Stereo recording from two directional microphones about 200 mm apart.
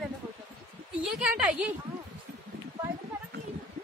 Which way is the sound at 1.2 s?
5° right (ahead or behind).